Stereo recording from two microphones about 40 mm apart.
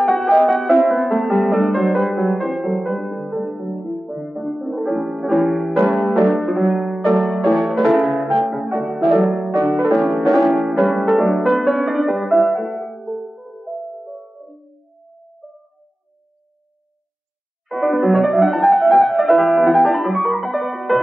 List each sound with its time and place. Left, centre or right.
0.0 s music: centre
15.4 s music: right
17.6 s piano: centre